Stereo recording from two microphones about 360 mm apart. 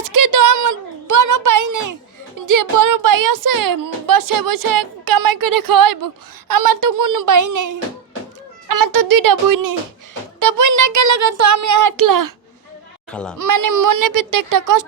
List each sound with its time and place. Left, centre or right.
0.0 s a sound: right
2.5 s speech: right
10.4 s speech: right
13.1 s speech: centre
13.4 s speech: right